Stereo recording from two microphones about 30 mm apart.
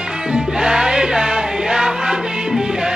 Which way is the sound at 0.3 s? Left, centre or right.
Right.